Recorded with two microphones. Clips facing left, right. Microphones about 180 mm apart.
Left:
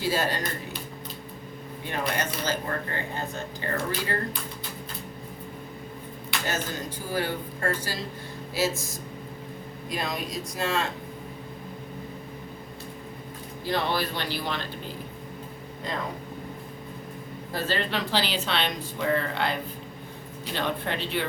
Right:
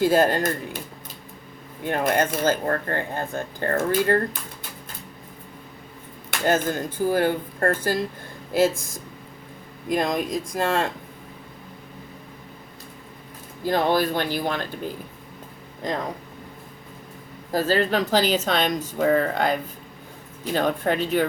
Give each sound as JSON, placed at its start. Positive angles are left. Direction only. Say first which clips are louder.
{"t": 0.0, "sound": "speech", "louder": "right 8 dB", "side_deg": -50}
{"t": 1.8, "sound": "speech", "louder": "right 8 dB", "side_deg": -50}
{"t": 6.4, "sound": "speech", "louder": "right 10 dB", "side_deg": -50}
{"t": 13.7, "sound": "speech", "louder": "right 7 dB", "side_deg": -45}
{"t": 17.5, "sound": "speech", "louder": "right 8 dB", "side_deg": -40}